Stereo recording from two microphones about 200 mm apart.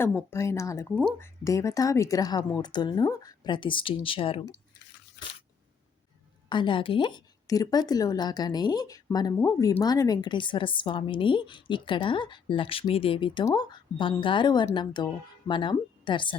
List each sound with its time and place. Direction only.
0.0 s speech: 10° left (ahead or behind); by 4.4 s 25° left (ahead or behind)
5.2 s a sound: 55° left (ahead or behind)
6.5 s speech: 25° left (ahead or behind)